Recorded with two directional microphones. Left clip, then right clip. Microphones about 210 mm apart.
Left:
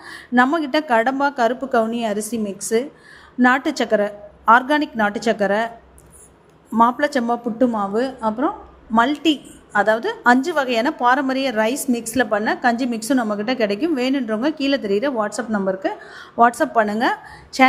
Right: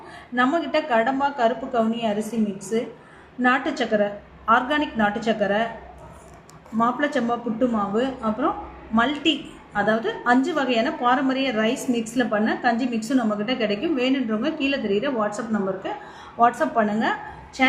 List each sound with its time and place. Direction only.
0.3 s a woman's voice: 50° left (ahead or behind)
6.7 s a woman's voice: 45° left (ahead or behind)